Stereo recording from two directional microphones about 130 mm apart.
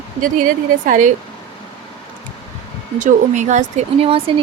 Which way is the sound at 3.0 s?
70° right (ahead or behind).